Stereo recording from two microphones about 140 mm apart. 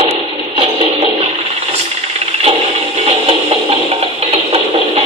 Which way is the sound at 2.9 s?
45° right (ahead or behind).